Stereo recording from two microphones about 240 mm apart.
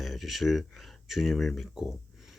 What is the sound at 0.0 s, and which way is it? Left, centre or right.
Speech, centre.